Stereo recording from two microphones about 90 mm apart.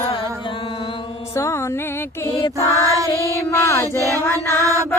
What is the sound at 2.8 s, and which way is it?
Child singing, 40° right (ahead or behind).